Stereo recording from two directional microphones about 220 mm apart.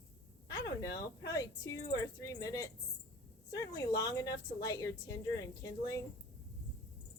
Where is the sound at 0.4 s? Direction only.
15° left (ahead or behind).